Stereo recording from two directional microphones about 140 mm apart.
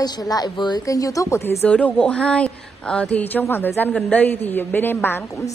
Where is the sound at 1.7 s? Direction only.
10° left (ahead or behind).